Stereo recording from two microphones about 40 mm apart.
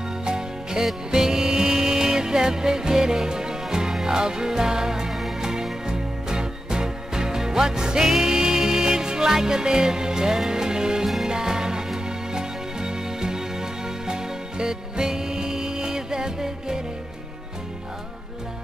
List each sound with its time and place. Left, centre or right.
0.2 s music: centre